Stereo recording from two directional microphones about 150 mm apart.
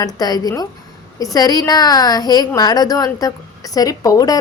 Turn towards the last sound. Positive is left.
turn(degrees=25)  # may be behind; listen again after turning